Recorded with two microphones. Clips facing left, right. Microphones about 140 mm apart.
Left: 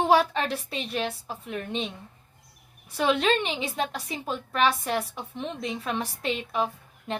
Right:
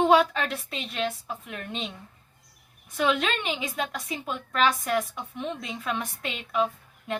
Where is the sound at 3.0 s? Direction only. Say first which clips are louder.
Left 2 dB; 30° left (ahead or behind).